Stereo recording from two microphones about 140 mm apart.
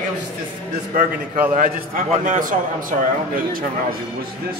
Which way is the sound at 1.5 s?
75° right (ahead or behind).